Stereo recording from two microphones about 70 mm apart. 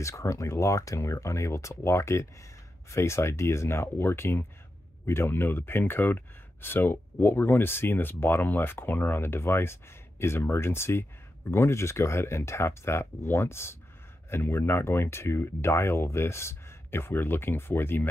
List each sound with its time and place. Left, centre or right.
0.0 s speech: left